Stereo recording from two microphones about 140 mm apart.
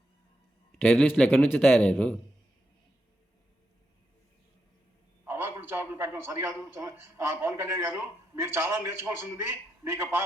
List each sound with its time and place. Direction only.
0.8 s a man's voice: 5° left (ahead or behind)
5.2 s a man's voice: 15° right (ahead or behind)